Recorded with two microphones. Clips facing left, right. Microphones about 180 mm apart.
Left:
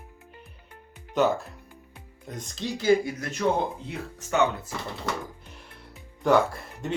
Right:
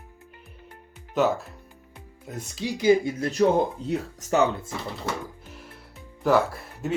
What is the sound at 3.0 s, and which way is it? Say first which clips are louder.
Speech: right 5 dB; 30° right (ahead or behind).